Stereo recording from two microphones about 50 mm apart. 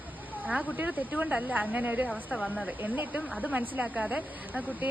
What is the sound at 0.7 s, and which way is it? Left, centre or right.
Speech, right.